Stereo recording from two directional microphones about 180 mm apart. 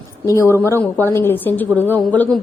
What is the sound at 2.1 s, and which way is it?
Speech, 10° left (ahead or behind).